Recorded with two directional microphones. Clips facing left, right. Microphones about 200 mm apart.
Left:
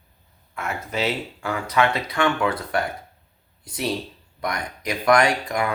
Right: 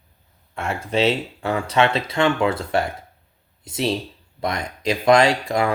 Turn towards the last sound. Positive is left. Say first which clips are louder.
# right 3 dB
turn(degrees=-30)  # may be behind; listen again after turning